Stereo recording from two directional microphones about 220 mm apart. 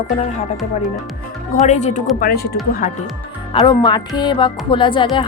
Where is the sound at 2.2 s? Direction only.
45° left (ahead or behind).